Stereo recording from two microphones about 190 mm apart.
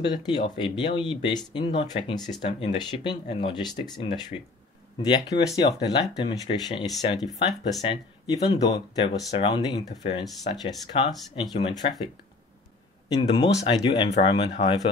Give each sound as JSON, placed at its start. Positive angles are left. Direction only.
{"t": 0.0, "sound": "speech", "side_deg": 25}
{"t": 7.2, "sound": "speech", "side_deg": 0}
{"t": 7.9, "sound": "speech", "side_deg": 25}
{"t": 13.1, "sound": "speech", "side_deg": 25}